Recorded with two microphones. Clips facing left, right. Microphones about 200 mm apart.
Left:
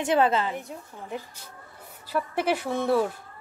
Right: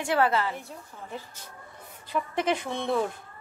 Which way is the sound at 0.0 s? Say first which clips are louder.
Left 2 dB; 20° left (ahead or behind).